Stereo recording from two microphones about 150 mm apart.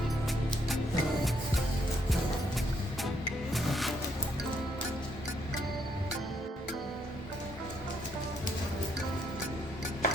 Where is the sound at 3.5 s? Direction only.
Centre (ahead or behind).